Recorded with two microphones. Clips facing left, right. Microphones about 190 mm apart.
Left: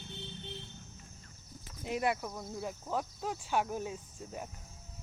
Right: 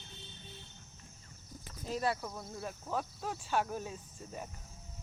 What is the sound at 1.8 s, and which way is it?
Speech, 20° left (ahead or behind).